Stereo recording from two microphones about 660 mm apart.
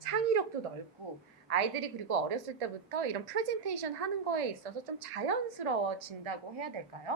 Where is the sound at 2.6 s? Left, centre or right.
Right.